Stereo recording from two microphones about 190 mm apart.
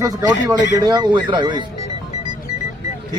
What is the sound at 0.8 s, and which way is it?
Speech, 20° right (ahead or behind).